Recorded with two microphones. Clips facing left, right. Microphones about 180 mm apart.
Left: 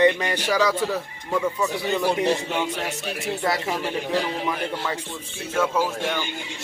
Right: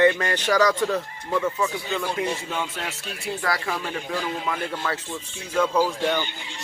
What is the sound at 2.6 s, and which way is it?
Speech, 20° left (ahead or behind).